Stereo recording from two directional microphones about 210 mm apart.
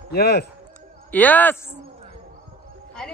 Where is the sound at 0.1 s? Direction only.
50° left (ahead or behind).